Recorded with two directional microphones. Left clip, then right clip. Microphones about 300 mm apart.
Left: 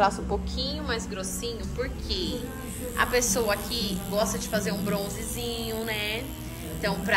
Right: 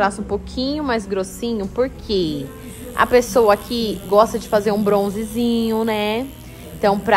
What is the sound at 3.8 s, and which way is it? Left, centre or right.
A woman's voice, centre.